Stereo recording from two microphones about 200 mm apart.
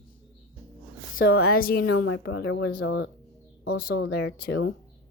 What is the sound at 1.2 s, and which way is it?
Speech, 80° left.